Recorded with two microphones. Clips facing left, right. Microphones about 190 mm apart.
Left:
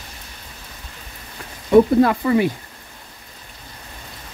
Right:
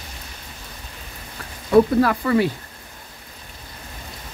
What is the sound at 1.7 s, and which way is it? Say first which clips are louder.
Speech: left 2 dB; 20° left (ahead or behind).